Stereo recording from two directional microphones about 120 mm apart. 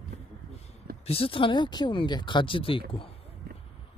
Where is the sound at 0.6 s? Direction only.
60° left (ahead or behind).